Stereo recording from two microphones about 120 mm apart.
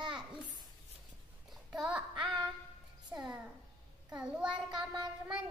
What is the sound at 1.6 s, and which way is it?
Child singing, 10° right (ahead or behind).